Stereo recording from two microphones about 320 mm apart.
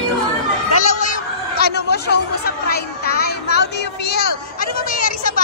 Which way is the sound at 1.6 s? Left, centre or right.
Left.